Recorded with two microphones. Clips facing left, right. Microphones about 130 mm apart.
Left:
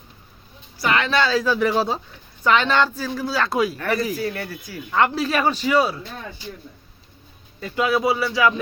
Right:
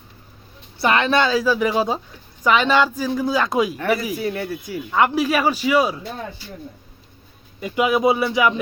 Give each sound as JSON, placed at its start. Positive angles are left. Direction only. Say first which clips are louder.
{"t": 0.8, "sound": "speech", "louder": "right 3 dB", "side_deg": -25}
{"t": 1.4, "sound": "speech", "louder": "right 1 dB", "side_deg": -10}
{"t": 4.9, "sound": "speech", "louder": "right 2 dB", "side_deg": -10}
{"t": 7.6, "sound": "speech", "louder": "right 3 dB", "side_deg": -15}